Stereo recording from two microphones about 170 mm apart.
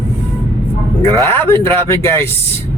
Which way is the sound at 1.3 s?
15° left (ahead or behind).